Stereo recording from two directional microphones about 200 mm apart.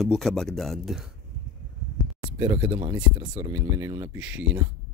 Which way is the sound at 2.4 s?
20° right (ahead or behind).